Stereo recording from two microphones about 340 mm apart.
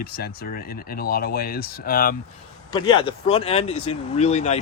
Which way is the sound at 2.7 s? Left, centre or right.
Centre.